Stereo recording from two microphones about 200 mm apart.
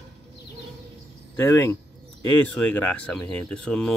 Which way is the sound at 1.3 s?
15° left (ahead or behind).